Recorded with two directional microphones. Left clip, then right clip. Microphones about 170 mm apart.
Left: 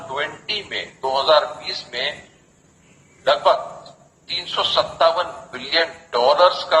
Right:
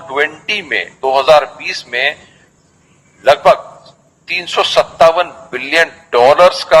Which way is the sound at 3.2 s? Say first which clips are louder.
Right 8 dB; 35° right (ahead or behind).